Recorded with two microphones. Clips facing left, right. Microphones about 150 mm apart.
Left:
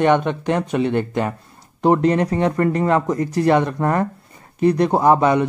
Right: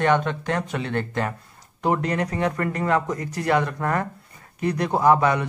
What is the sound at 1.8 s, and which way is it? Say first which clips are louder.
Speech: left 7 dB; 30° left (ahead or behind).